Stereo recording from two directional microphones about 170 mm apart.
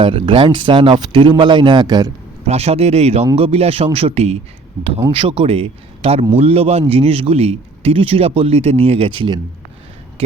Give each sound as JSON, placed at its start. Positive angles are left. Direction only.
{"t": 0.0, "sound": "speech", "side_deg": -30}
{"t": 2.5, "sound": "a man's voice", "side_deg": -40}